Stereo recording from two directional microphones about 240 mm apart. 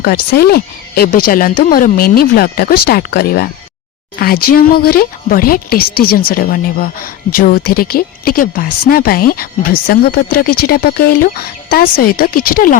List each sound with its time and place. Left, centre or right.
0.0 s speech: left